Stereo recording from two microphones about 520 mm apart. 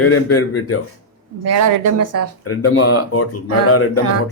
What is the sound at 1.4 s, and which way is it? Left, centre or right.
Speech, right.